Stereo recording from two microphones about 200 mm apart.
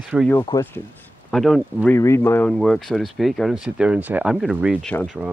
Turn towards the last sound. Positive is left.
turn(degrees=5)  # may be behind; listen again after turning